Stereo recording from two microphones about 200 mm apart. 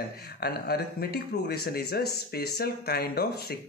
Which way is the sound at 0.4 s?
50° left (ahead or behind).